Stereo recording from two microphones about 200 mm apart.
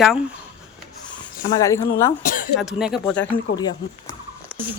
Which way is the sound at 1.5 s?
15° left (ahead or behind).